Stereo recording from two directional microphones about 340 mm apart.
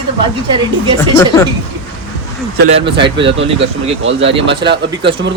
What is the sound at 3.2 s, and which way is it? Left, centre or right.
A man's voice, right.